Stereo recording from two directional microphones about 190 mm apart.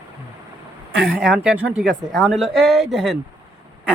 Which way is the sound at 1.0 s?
5° right (ahead or behind).